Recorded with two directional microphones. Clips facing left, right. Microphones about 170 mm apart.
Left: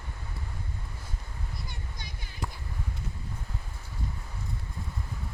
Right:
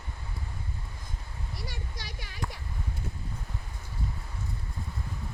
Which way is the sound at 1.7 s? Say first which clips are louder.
Right 2 dB; 90° right.